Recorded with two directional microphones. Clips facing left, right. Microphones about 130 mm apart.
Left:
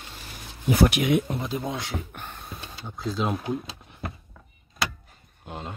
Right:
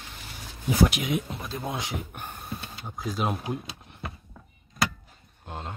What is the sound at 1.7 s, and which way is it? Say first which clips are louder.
Speech: left 1 dB; 15° right (ahead or behind).